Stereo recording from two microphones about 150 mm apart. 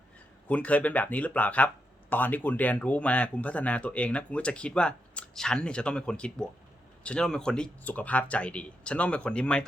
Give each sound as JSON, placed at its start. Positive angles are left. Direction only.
{"t": 0.4, "sound": "speech", "side_deg": 10}